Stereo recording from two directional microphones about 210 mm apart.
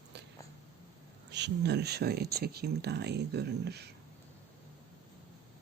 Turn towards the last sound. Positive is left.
turn(degrees=-50)  # may be behind; listen again after turning